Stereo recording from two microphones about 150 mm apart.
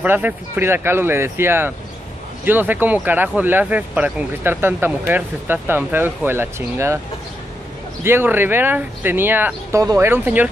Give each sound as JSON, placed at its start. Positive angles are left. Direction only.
{"t": 0.0, "sound": "speech", "side_deg": -10}
{"t": 8.0, "sound": "speech", "side_deg": -15}